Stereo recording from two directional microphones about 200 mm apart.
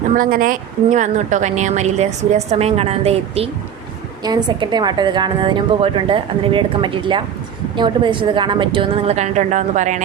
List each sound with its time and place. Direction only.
0.2 s a woman's voice: 45° right (ahead or behind)